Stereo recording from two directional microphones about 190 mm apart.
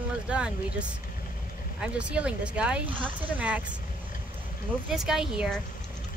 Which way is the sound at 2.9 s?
25° right (ahead or behind).